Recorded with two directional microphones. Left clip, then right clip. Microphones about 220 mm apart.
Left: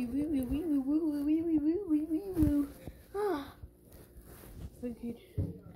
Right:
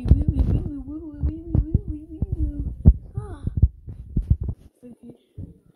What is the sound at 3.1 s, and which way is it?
Heart sounds, 10° left (ahead or behind).